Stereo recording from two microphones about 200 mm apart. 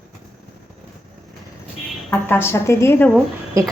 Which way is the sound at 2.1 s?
10° left (ahead or behind).